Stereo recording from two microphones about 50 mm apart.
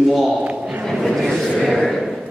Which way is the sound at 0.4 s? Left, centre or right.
Right.